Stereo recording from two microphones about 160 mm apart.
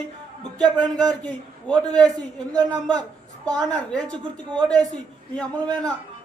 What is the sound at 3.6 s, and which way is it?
A man's voice, 5° left (ahead or behind).